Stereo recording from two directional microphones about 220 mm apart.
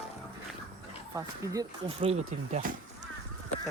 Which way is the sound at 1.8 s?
25° right (ahead or behind).